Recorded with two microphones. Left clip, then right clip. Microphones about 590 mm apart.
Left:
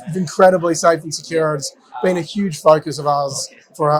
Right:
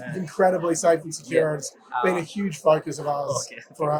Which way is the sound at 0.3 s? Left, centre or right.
Left.